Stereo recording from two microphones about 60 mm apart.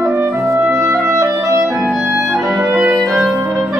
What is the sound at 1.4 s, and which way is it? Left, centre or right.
Clarinet, right.